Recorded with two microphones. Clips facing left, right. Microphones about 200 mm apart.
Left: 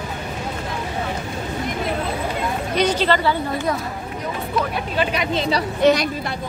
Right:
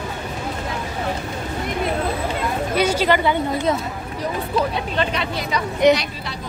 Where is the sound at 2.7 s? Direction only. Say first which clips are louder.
Even; 10° right (ahead or behind).